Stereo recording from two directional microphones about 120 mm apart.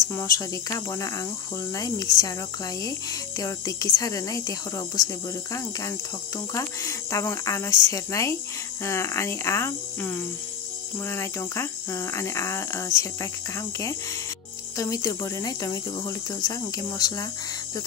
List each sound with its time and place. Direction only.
0.0 s speech: 25° left (ahead or behind)